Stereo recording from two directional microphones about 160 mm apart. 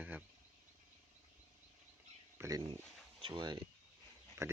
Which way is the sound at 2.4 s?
20° right (ahead or behind).